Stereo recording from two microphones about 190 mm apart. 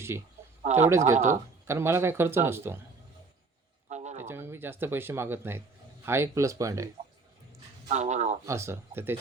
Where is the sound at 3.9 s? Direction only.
35° right (ahead or behind).